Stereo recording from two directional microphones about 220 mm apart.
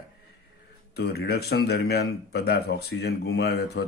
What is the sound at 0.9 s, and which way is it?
Speech, 45° left (ahead or behind).